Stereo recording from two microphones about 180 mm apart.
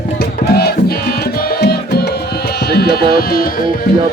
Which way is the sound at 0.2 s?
60° left (ahead or behind).